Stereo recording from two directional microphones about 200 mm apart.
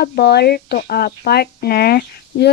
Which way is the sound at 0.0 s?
55° left (ahead or behind).